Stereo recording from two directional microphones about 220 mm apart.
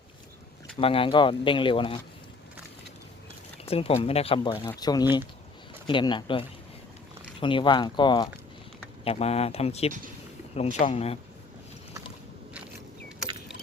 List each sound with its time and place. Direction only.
0.8 s speech: 25° left (ahead or behind)
3.7 s speech: 25° left (ahead or behind)